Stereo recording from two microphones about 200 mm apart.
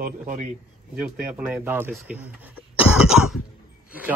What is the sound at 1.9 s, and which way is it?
Throat clearing, 5° right (ahead or behind).